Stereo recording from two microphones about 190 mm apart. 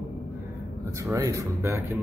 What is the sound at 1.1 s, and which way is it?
Speech, 15° right (ahead or behind).